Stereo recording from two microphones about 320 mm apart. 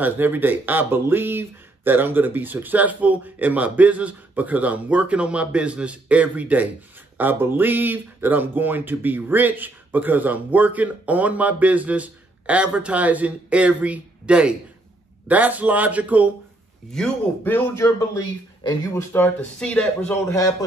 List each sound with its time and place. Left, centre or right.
0.0 s a man's voice: centre